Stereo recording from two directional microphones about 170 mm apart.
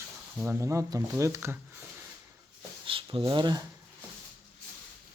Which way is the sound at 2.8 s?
30° right (ahead or behind).